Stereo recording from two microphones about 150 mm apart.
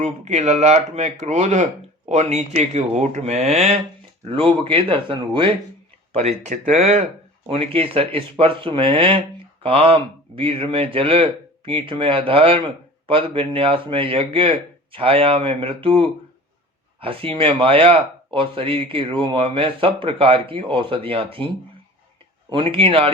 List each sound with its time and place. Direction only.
0.0 s a man's voice: 50° right (ahead or behind)
6.1 s a man's voice: 45° right (ahead or behind)